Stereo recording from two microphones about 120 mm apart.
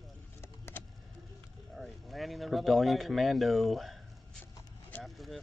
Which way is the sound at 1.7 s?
Centre (ahead or behind).